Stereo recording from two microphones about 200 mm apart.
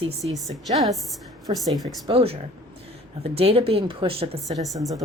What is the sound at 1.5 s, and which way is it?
A woman's voice, 30° right (ahead or behind).